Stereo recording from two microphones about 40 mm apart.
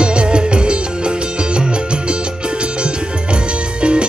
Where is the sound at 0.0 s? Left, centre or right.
Right.